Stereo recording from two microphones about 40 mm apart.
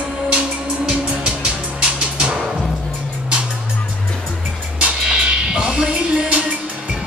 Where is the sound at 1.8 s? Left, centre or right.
Right.